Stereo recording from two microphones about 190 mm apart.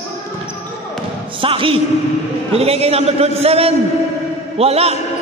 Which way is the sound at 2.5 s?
30° right (ahead or behind).